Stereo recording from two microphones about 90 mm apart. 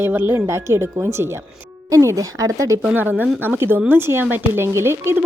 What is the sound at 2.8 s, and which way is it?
A woman's voice, 20° right (ahead or behind).